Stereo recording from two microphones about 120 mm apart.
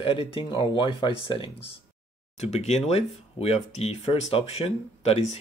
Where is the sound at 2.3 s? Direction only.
70° left (ahead or behind).